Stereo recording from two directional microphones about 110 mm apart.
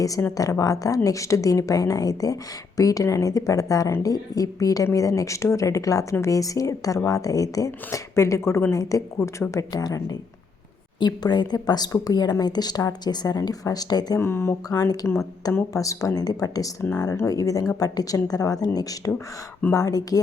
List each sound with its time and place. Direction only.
0.0 s a woman's voice: 30° left (ahead or behind)
14.2 s a woman's voice: 20° left (ahead or behind)